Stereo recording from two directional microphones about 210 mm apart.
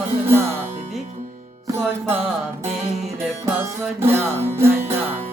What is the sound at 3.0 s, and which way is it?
Speech, centre (ahead or behind).